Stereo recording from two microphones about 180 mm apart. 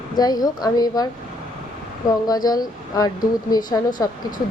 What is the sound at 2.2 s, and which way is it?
Speech, 20° left (ahead or behind).